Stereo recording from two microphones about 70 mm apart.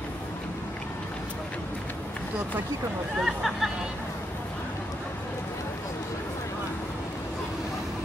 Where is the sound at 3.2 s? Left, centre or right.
Centre.